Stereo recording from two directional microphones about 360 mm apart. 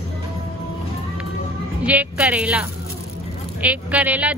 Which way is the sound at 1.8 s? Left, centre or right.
Centre.